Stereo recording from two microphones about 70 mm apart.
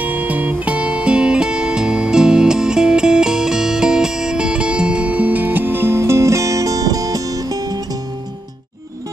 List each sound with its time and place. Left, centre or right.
0.0 s music: right